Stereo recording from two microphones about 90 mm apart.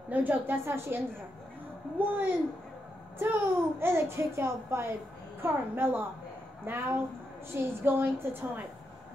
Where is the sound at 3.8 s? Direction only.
25° right (ahead or behind).